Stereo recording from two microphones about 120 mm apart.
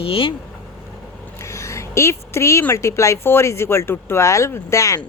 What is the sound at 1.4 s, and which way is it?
A woman's voice, 25° left (ahead or behind).